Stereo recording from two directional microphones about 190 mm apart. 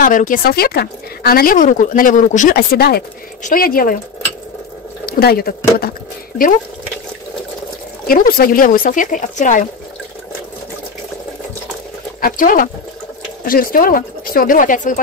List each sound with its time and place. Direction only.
0.0 s speech: 45° left (ahead or behind)
5.0 s speech: 55° left (ahead or behind)
8.1 s speech: 50° left (ahead or behind)
12.2 s speech: 50° left (ahead or behind)